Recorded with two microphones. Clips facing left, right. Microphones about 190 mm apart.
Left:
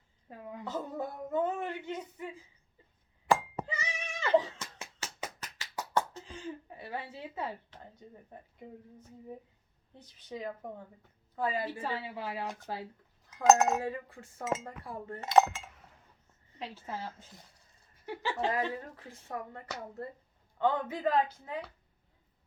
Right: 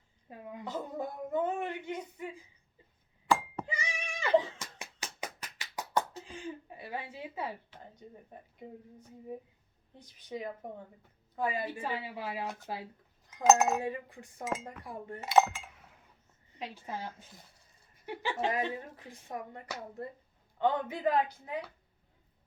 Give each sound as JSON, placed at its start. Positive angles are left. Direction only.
{"t": 0.3, "sound": "a woman's voice", "side_deg": -15}
{"t": 3.7, "sound": "cat", "side_deg": -10}
{"t": 6.1, "sound": "a woman's voice", "side_deg": -15}
{"t": 10.2, "sound": "a woman's voice", "side_deg": -15}
{"t": 13.4, "sound": "speech", "side_deg": 0}
{"t": 13.7, "sound": "a woman's voice", "side_deg": -15}
{"t": 15.2, "sound": "chink", "side_deg": 0}
{"t": 16.6, "sound": "a woman's voice", "side_deg": -15}